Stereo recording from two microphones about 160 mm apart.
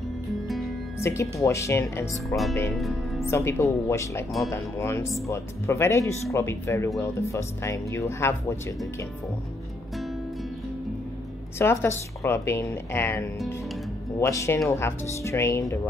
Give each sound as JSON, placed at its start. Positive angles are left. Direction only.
{"t": 0.9, "sound": "speech", "side_deg": 15}
{"t": 11.5, "sound": "speech", "side_deg": 15}